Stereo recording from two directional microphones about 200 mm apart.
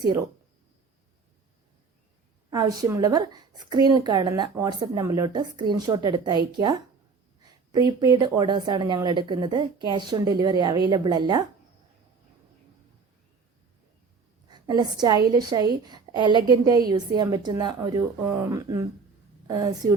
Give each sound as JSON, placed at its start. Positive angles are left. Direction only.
{"t": 2.5, "sound": "a woman's voice", "side_deg": -15}
{"t": 14.4, "sound": "a woman's voice", "side_deg": -20}